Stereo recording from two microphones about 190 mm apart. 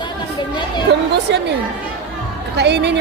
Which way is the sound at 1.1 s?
65° right (ahead or behind).